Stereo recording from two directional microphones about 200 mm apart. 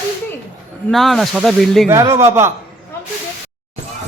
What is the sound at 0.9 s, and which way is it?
Speech, centre (ahead or behind).